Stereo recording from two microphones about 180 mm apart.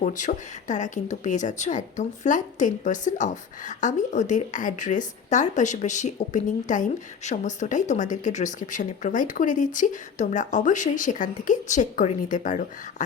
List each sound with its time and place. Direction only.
0.0 s speech: 45° left (ahead or behind)